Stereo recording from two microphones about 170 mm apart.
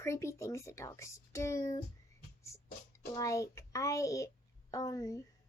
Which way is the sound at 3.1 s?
20° left (ahead or behind).